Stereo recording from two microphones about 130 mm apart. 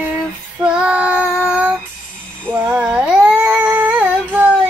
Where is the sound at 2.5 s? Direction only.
10° right (ahead or behind).